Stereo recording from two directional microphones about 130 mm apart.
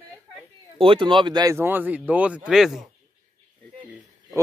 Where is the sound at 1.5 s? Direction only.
15° right (ahead or behind).